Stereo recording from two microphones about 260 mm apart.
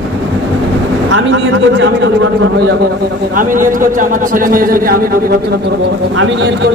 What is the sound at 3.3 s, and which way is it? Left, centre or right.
A man's voice, right.